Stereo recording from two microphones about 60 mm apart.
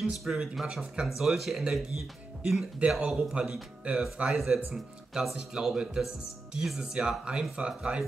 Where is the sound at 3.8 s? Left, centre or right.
Right.